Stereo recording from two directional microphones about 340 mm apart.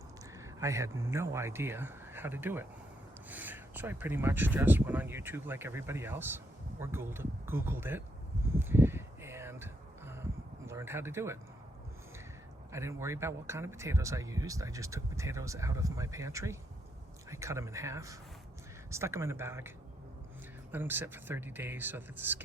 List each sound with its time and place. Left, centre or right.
0.3 s speech: centre
8.5 s a sound: centre
10.7 s speech: centre
12.7 s speech: centre